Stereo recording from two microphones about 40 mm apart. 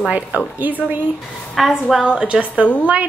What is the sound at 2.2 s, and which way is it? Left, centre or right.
Speech, right.